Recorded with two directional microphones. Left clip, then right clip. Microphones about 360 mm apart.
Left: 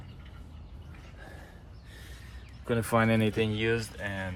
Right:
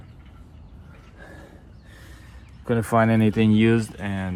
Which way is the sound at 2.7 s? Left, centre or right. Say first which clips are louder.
Right 6 dB; centre.